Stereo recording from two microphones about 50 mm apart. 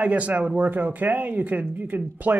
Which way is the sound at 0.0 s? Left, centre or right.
Right.